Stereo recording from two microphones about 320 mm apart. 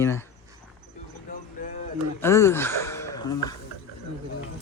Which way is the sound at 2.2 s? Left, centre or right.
Centre.